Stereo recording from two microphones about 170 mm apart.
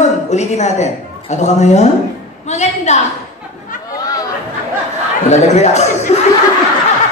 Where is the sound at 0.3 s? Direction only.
40° left (ahead or behind).